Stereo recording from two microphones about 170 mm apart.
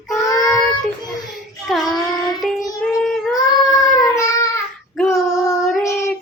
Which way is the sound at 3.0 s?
Centre (ahead or behind).